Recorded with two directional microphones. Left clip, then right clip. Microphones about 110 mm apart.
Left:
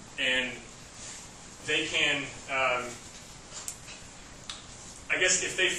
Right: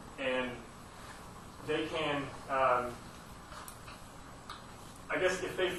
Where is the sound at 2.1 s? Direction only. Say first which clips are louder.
Left 3 dB; 25° left (ahead or behind).